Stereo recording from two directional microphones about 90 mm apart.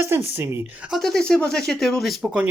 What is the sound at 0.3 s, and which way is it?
Speech, 25° right (ahead or behind).